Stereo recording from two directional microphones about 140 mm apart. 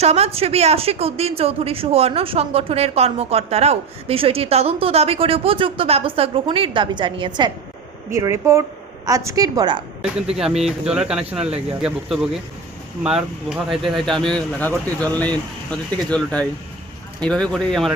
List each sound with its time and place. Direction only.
0.0 s speech: 50° right (ahead or behind); by 7.5 s 35° right (ahead or behind)
8.1 s a woman's voice: 20° right (ahead or behind)
10.3 s speech: 5° right (ahead or behind)
13.5 s speech: centre (ahead or behind)